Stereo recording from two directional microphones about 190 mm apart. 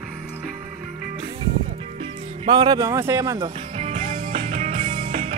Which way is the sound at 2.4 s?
20° right (ahead or behind).